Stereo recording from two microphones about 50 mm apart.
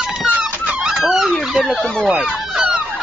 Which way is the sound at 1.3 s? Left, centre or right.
Centre.